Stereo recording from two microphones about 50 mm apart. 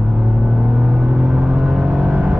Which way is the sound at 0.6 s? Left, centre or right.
Right.